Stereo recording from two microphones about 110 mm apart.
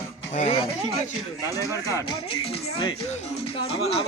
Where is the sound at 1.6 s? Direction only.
30° left (ahead or behind).